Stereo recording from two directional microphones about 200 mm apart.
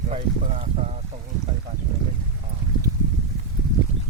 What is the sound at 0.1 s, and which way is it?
Speech, 30° right (ahead or behind).